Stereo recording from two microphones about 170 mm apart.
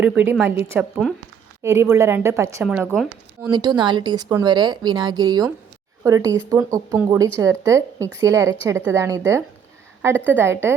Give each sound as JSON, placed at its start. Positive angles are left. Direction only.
{"t": 0.0, "sound": "a woman's voice", "side_deg": -10}
{"t": 3.5, "sound": "a woman's voice", "side_deg": -25}